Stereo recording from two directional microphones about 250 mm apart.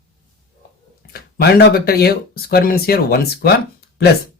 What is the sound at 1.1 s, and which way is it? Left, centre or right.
Speech, left.